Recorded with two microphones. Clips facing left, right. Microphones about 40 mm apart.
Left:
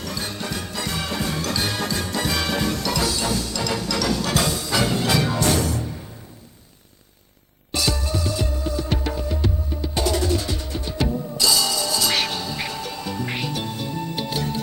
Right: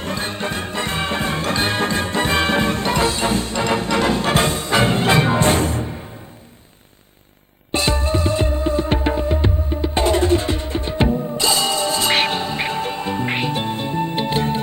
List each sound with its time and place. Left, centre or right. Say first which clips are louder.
0.0 s music: right 5 dB; right
7.7 s music: right 5 dB; right